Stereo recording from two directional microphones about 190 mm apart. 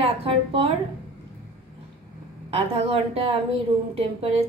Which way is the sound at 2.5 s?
30° right (ahead or behind).